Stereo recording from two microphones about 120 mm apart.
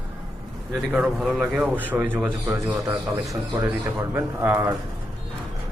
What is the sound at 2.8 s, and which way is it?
Speech, 30° right (ahead or behind).